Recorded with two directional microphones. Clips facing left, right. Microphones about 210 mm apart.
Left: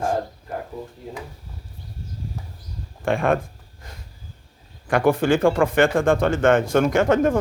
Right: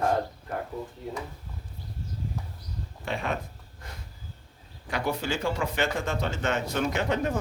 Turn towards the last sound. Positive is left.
turn(degrees=50)  # may be behind; listen again after turning